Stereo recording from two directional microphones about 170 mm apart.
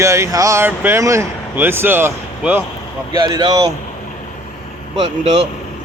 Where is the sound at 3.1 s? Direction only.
25° right (ahead or behind).